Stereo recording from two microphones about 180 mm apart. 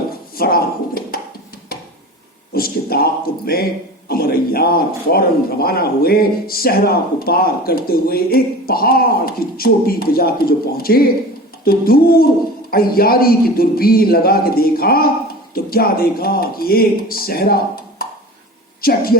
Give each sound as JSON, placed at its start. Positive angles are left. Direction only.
{"t": 0.3, "sound": "a sound", "side_deg": 55}
{"t": 2.5, "sound": "a man's voice", "side_deg": 55}
{"t": 18.8, "sound": "a woman's voice", "side_deg": 55}